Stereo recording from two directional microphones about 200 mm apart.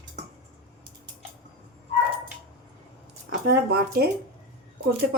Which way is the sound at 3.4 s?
50° right (ahead or behind).